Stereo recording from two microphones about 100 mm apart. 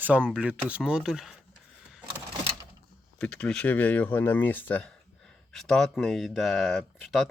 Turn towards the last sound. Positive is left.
turn(degrees=0)  # may be behind; listen again after turning